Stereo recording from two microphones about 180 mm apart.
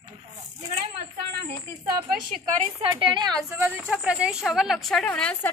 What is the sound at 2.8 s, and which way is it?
Speech, 25° right (ahead or behind).